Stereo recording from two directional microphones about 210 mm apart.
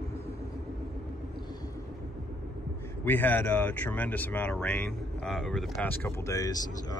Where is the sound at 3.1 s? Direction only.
10° left (ahead or behind).